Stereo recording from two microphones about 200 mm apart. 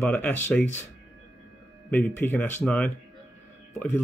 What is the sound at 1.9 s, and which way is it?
Speech, 10° left (ahead or behind).